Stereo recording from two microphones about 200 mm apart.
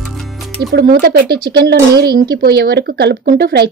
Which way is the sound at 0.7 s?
50° right (ahead or behind).